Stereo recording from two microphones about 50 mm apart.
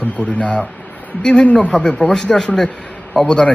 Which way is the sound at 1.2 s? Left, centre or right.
Centre.